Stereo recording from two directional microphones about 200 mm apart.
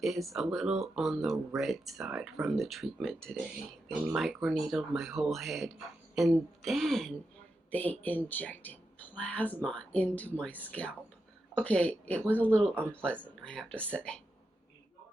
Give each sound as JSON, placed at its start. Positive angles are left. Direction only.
{"t": 0.0, "sound": "speech", "side_deg": 0}